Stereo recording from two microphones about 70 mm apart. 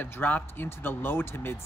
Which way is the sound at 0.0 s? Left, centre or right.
Left.